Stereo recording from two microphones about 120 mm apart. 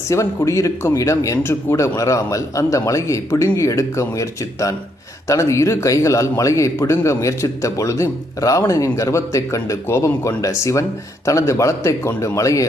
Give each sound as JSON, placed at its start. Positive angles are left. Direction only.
{"t": 0.1, "sound": "a man's voice", "side_deg": 25}